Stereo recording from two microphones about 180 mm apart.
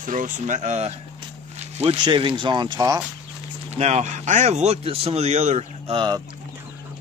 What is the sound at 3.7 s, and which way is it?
A man's voice, 40° right (ahead or behind).